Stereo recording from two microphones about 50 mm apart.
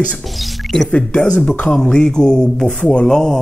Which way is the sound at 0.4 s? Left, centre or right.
Centre.